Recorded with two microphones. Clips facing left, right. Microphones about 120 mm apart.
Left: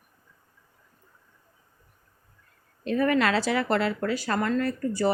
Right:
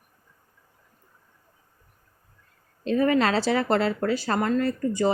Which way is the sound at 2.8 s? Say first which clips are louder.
Right 2 dB; 25° right (ahead or behind).